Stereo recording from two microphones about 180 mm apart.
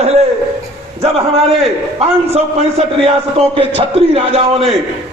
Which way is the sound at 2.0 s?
35° right (ahead or behind).